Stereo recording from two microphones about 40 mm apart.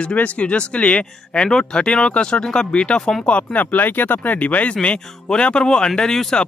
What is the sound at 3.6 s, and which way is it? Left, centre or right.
Speech, left.